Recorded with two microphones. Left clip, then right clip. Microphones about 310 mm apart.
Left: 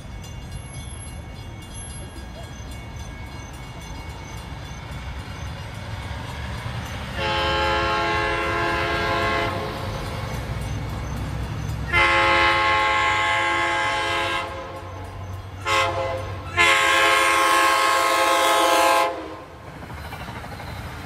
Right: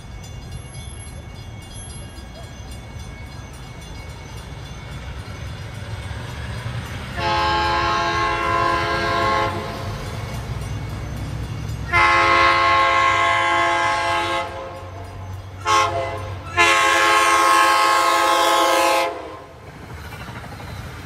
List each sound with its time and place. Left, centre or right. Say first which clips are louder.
6.1 s vehicle: right 1 dB; left
7.2 s train: right 3 dB; centre
11.9 s train: right 3 dB; centre
15.6 s train: right 3 dB; centre